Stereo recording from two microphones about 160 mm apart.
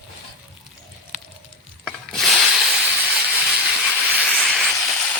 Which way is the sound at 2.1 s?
Centre (ahead or behind).